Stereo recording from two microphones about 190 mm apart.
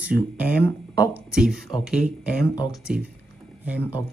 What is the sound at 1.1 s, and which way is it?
Speech, 5° right (ahead or behind).